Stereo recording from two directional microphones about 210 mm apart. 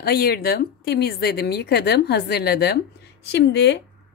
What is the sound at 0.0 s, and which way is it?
A woman's voice, 45° left (ahead or behind).